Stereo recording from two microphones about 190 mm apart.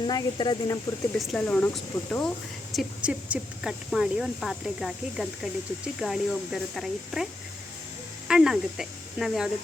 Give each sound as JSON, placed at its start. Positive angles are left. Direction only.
{"t": 0.1, "sound": "speech", "side_deg": 20}
{"t": 1.3, "sound": "speech", "side_deg": 5}
{"t": 8.3, "sound": "speech", "side_deg": -5}